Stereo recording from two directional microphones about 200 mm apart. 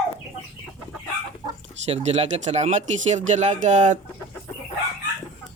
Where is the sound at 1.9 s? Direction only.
30° right (ahead or behind).